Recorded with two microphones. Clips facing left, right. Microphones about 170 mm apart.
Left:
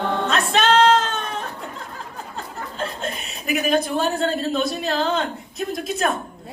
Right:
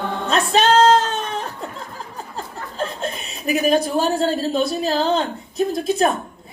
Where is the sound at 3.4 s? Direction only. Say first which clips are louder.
Right 3 dB; 35° right (ahead or behind).